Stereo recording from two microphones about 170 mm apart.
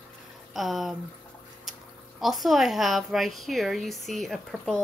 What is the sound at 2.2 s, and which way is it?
A woman's voice, centre (ahead or behind).